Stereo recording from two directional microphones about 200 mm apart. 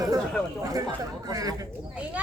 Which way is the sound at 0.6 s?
20° right (ahead or behind).